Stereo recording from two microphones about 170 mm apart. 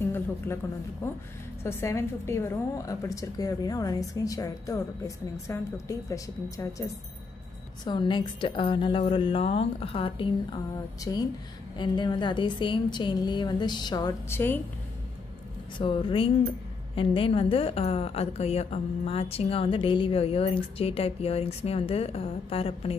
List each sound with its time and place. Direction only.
0.0 s a sound: 15° left (ahead or behind)
1.6 s a woman's voice: 15° left (ahead or behind)
7.8 s a woman's voice: 25° left (ahead or behind)
15.8 s a woman's voice: 30° left (ahead or behind)